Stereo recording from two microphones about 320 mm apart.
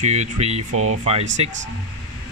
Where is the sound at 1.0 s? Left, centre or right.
Centre.